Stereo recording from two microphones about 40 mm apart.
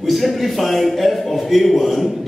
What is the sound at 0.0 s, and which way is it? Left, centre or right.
A man's voice, centre.